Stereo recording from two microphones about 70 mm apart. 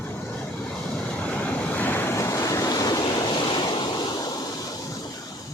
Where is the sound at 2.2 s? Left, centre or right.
Left.